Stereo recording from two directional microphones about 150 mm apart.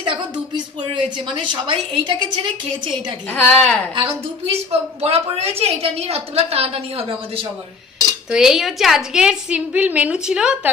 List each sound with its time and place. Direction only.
1.3 s a woman's voice: 35° right (ahead or behind)
3.3 s a woman's voice: 10° left (ahead or behind)
3.9 s a woman's voice: 35° right (ahead or behind)
8.3 s a woman's voice: 5° right (ahead or behind)